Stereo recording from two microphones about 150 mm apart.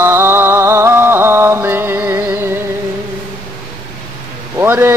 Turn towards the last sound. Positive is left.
turn(degrees=-15)  # may be behind; listen again after turning